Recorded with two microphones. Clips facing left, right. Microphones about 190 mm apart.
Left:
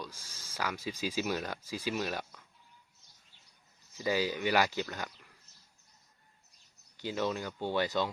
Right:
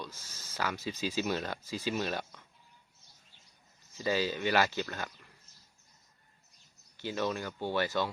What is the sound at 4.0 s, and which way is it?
Speech, 15° left (ahead or behind).